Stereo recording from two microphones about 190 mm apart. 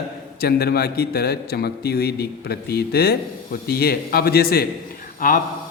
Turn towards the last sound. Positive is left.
turn(degrees=45)  # may be behind; listen again after turning